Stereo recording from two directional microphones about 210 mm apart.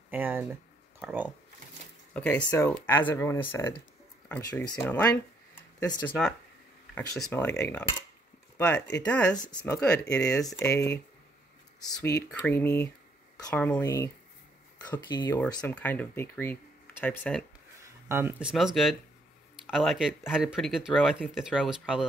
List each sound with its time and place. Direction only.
0.1 s a sound: 10° right (ahead or behind)
1.0 s speech: 5° right (ahead or behind)
2.1 s speech: 5° left (ahead or behind)
7.3 s speech: 10° left (ahead or behind)
15.4 s speech: 10° left (ahead or behind)
18.0 s speech: 10° right (ahead or behind)